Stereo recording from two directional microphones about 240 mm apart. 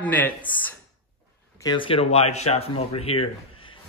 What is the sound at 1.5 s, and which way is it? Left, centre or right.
Speech, centre.